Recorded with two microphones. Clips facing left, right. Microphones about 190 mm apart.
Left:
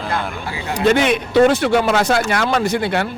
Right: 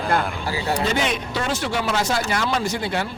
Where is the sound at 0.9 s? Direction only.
60° left (ahead or behind).